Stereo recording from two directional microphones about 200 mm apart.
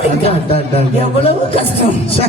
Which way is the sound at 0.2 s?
30° left (ahead or behind).